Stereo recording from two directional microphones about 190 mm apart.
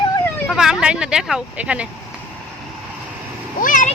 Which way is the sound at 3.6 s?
45° left (ahead or behind).